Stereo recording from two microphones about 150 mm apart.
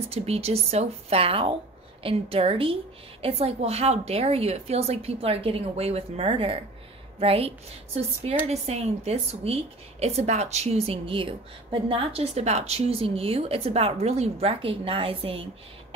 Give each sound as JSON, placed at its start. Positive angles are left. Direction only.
{"t": 0.1, "sound": "a woman's voice", "side_deg": -45}